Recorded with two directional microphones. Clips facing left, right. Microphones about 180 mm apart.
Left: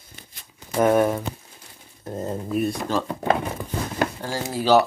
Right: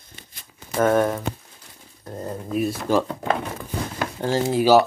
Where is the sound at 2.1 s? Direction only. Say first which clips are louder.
Left 3 dB; 20° left (ahead or behind).